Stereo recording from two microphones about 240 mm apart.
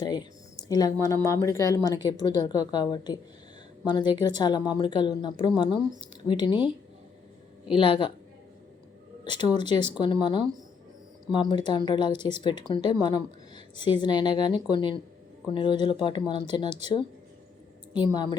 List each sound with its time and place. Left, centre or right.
0.0 s a woman's voice: centre
7.7 s a woman's voice: left
9.2 s a woman's voice: centre
18.0 s speech: centre